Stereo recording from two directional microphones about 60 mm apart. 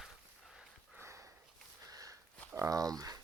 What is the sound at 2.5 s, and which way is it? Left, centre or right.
Speech, right.